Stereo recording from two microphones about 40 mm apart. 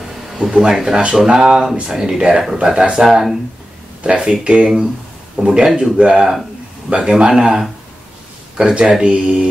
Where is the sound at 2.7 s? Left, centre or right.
Centre.